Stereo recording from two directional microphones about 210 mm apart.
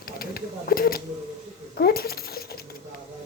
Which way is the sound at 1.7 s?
45° left (ahead or behind).